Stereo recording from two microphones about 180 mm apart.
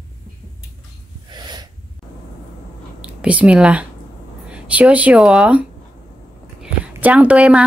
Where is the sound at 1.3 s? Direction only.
25° right (ahead or behind).